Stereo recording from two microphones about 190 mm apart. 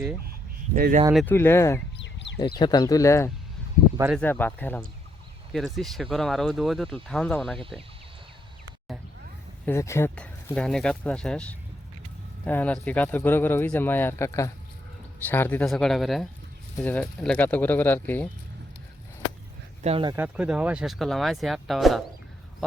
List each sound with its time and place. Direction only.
0.8 s speech: 45° right (ahead or behind)
1.1 s speech: 10° left (ahead or behind)
2.1 s a sound: 70° left (ahead or behind)
2.6 s speech: 20° left (ahead or behind); by 7.6 s centre (ahead or behind)
9.6 s speech: 15° left (ahead or behind)
19.8 s speech: 30° right (ahead or behind)
20.1 s speech: 5° right (ahead or behind)